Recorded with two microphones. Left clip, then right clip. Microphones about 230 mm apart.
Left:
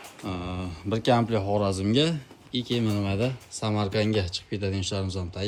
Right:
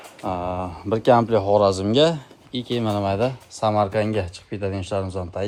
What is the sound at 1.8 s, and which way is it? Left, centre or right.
Speech, centre.